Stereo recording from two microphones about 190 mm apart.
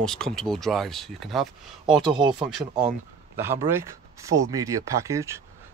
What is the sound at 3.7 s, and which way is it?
Speech, 15° right (ahead or behind).